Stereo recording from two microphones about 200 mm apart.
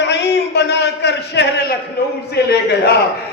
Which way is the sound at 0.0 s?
60° left (ahead or behind).